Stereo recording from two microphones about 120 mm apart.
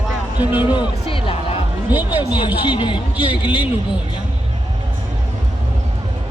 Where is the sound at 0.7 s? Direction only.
45° left (ahead or behind).